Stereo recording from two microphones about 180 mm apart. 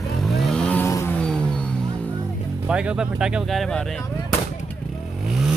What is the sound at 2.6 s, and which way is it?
Speech, 5° right (ahead or behind).